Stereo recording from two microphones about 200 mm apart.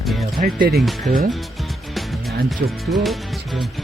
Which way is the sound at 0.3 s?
45° right (ahead or behind).